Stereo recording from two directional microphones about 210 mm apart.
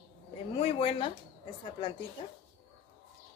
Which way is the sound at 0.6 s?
25° left (ahead or behind).